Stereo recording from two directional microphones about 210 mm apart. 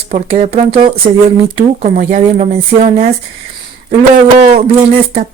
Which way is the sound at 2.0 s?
35° right (ahead or behind).